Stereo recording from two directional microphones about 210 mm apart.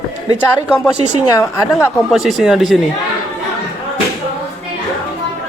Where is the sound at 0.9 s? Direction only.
30° right (ahead or behind).